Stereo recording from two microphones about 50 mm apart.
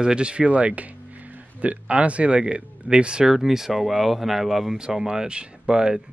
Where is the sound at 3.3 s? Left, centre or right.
Centre.